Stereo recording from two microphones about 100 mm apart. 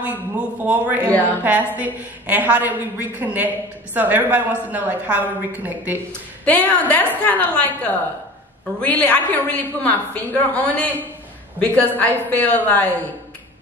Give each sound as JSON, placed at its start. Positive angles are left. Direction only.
{"t": 0.0, "sound": "a man's voice", "side_deg": -15}
{"t": 1.0, "sound": "a woman's voice", "side_deg": 15}
{"t": 1.4, "sound": "a woman's voice", "side_deg": -15}
{"t": 6.4, "sound": "a woman's voice", "side_deg": 15}